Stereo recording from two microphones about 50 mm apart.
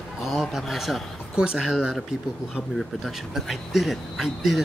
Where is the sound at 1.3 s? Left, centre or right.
Centre.